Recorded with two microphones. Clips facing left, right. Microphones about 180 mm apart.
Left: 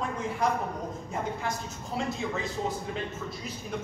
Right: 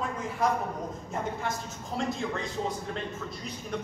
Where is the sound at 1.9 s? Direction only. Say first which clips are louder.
Even; 5° left (ahead or behind).